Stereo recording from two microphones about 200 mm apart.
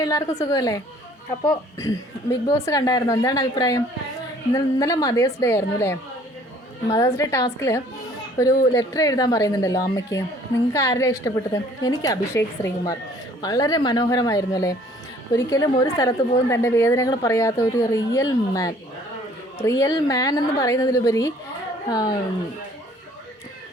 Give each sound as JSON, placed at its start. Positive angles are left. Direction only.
{"t": 0.0, "sound": "a woman's voice", "side_deg": 15}
{"t": 2.3, "sound": "a woman's voice", "side_deg": 15}
{"t": 7.2, "sound": "a woman's voice", "side_deg": 15}